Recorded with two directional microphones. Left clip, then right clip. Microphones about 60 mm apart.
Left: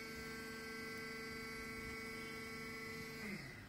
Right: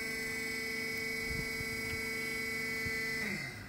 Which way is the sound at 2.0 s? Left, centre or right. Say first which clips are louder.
Right 11 dB; left.